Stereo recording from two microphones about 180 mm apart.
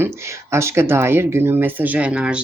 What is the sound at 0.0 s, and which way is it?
Speech, 15° right (ahead or behind).